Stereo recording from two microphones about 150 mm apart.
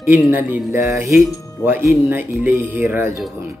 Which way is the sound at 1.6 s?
15° right (ahead or behind).